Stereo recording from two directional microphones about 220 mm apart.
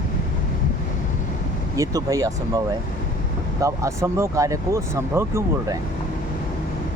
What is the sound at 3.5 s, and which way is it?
Speech, 15° right (ahead or behind).